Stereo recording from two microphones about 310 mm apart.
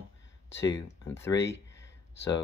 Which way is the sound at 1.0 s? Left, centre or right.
Centre.